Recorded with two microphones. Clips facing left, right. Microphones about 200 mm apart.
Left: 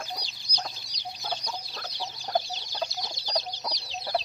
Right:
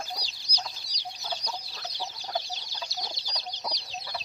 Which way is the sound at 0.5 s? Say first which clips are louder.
Left 2 dB; 50° left (ahead or behind).